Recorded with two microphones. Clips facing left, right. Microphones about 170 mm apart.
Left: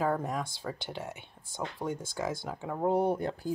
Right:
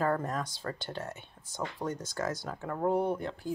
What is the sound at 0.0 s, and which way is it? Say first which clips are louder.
Speech: even; 5° left (ahead or behind).